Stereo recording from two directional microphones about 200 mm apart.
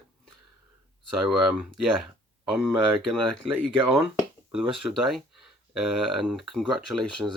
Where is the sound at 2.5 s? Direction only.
Centre (ahead or behind).